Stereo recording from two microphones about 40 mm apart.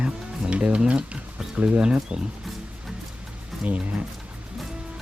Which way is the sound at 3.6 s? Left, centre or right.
Right.